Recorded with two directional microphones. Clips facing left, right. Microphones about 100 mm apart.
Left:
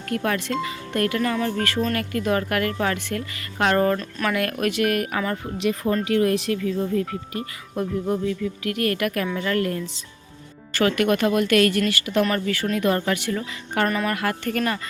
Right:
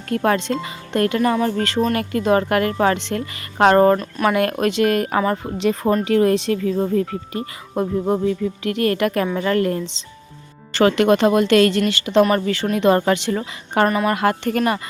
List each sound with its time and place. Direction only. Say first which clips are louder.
0.1 s speech: right 5 dB; 30° right (ahead or behind)
6.6 s speech: right 4 dB; 45° right (ahead or behind)
6.9 s speech: right 4 dB; 30° right (ahead or behind)
13.8 s a woman's voice: right 5 dB; 15° right (ahead or behind)
14.1 s speech: right 6 dB; 25° right (ahead or behind)